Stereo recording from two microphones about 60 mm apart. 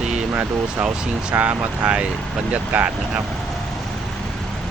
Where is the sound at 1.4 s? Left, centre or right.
Right.